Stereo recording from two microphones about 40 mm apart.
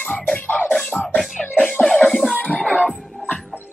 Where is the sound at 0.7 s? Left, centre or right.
Centre.